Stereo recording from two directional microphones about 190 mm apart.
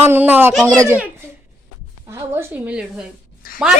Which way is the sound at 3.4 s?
50° left (ahead or behind).